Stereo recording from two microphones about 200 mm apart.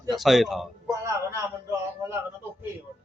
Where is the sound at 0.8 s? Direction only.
15° right (ahead or behind).